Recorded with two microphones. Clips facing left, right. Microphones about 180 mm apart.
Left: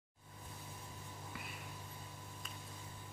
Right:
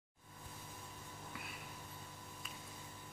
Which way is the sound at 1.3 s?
Centre (ahead or behind).